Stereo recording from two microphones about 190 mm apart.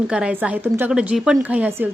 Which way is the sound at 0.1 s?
5° right (ahead or behind).